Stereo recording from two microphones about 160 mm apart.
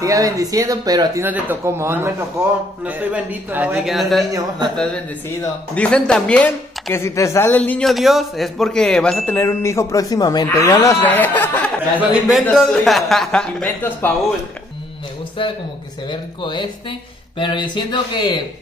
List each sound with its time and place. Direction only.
0.0 s speech: 20° right (ahead or behind)
1.2 s a man's voice: 10° right (ahead or behind)
4.3 s speech: 20° right (ahead or behind)
5.8 s speech: 5° left (ahead or behind)
12.0 s speech: 5° right (ahead or behind); by 14.1 s 10° left (ahead or behind)
16.1 s speech: 30° left (ahead or behind)